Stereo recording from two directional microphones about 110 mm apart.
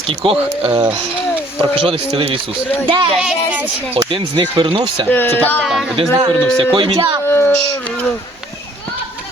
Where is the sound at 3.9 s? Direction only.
55° right (ahead or behind).